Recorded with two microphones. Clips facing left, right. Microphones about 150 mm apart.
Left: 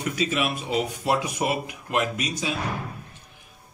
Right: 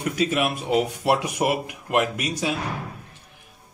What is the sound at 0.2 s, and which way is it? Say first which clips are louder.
Speech: right 3 dB; 55° right (ahead or behind).